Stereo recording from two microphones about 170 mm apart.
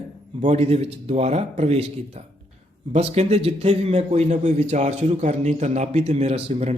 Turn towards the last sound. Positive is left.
turn(degrees=-40)  # may be behind; listen again after turning